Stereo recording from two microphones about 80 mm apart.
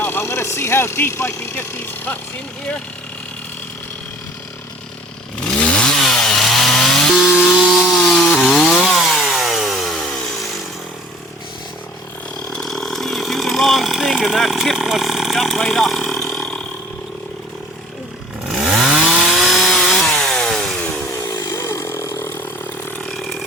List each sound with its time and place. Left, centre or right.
0.0 s speech: left
5.5 s chainsaw: centre
12.5 s chainsaw: centre
18.4 s chainsaw: centre
21.2 s chainsaw: left
23.0 s ratchet: centre